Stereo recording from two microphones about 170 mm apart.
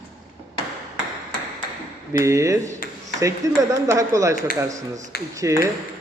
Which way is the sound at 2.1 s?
20° right (ahead or behind).